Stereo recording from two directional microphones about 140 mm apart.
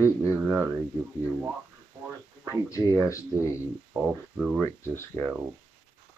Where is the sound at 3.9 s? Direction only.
5° right (ahead or behind).